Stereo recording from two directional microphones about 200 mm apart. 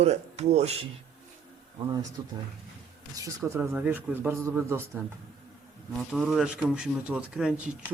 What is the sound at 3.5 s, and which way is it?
A man's voice, 15° right (ahead or behind).